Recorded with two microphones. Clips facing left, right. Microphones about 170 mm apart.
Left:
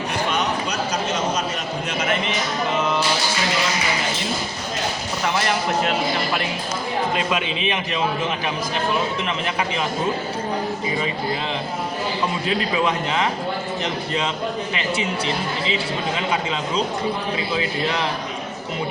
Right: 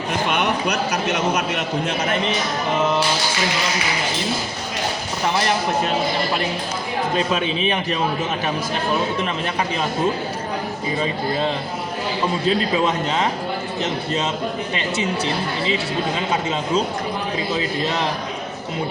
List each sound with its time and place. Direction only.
0.3 s a sound: 60° right (ahead or behind)
7.3 s a man's voice: 35° right (ahead or behind)
12.5 s a man's voice: 35° right (ahead or behind)